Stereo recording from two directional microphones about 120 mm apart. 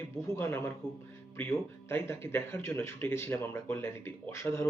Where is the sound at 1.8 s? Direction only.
20° left (ahead or behind).